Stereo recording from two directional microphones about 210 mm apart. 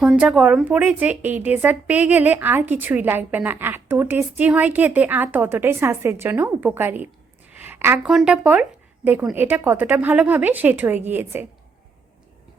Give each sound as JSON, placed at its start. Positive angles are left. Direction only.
{"t": 0.0, "sound": "a woman's voice", "side_deg": -5}